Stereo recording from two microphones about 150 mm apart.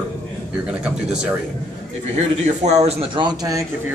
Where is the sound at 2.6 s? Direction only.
45° right (ahead or behind); by 3.6 s 25° right (ahead or behind).